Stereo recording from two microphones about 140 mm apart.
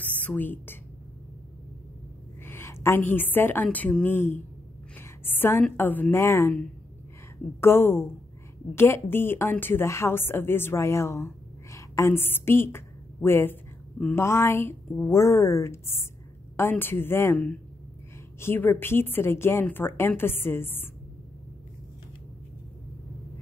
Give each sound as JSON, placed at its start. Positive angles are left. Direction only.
{"t": 0.2, "sound": "a woman's voice", "side_deg": 10}
{"t": 2.4, "sound": "a woman's voice", "side_deg": 15}
{"t": 7.6, "sound": "a woman's voice", "side_deg": 15}